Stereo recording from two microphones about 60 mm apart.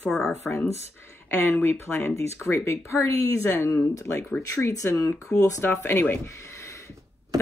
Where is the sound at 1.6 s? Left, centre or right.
Left.